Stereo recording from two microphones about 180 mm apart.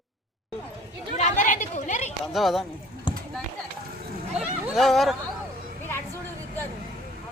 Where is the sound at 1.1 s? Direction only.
45° left (ahead or behind).